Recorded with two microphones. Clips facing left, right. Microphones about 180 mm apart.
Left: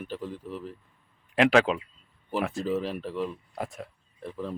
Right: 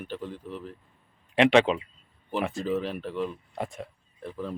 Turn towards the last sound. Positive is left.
turn(degrees=0)  # may be behind; listen again after turning